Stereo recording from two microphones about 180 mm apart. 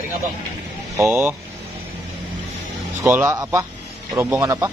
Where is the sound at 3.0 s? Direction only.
10° right (ahead or behind).